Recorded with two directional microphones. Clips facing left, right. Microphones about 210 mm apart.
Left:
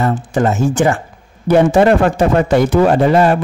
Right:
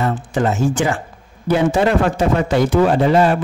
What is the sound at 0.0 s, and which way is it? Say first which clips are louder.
Speech: left 3 dB; 45° left (ahead or behind).